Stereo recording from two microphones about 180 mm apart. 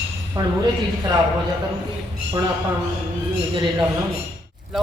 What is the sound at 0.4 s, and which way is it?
Speech, 20° right (ahead or behind).